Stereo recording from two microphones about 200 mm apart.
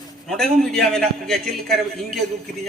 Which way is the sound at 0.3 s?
Centre (ahead or behind).